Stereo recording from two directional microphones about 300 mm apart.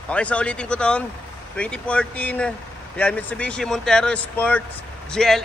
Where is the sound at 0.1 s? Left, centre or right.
Centre.